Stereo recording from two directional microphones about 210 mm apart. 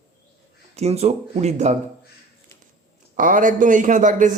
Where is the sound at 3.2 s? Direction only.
40° right (ahead or behind).